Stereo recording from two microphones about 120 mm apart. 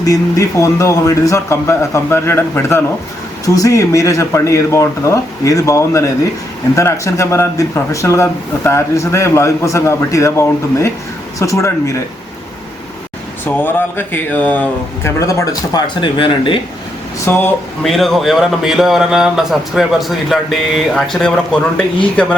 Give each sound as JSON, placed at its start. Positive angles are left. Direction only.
{"t": 0.0, "sound": "a man's voice", "side_deg": 30}
{"t": 13.4, "sound": "speech", "side_deg": 15}
{"t": 15.2, "sound": "a man's voice", "side_deg": 25}
{"t": 16.0, "sound": "speech", "side_deg": 45}
{"t": 17.2, "sound": "speech", "side_deg": 20}
{"t": 17.8, "sound": "speech", "side_deg": 0}